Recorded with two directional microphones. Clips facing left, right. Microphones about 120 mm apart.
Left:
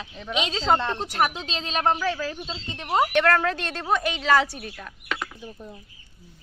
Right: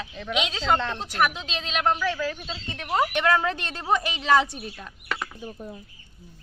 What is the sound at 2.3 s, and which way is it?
Speech, 20° left (ahead or behind).